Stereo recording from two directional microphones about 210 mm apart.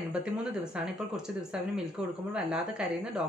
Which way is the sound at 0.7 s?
Centre (ahead or behind).